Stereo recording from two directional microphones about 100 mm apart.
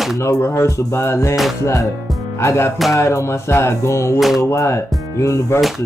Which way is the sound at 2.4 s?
25° left (ahead or behind).